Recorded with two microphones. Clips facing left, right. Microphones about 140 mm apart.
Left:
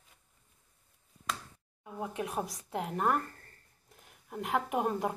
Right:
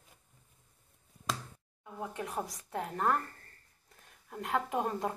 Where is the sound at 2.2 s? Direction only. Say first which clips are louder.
Left 2 dB; 15° left (ahead or behind).